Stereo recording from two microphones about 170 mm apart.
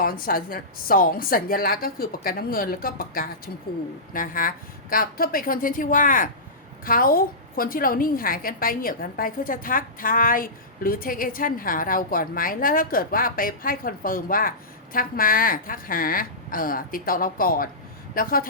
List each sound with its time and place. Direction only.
0.0 s a woman's voice: 55° left (ahead or behind)